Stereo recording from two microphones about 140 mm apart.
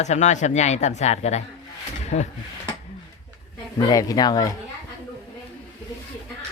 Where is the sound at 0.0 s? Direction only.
55° left (ahead or behind).